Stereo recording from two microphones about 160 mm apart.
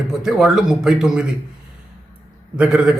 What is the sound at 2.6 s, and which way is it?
Speech, 5° right (ahead or behind).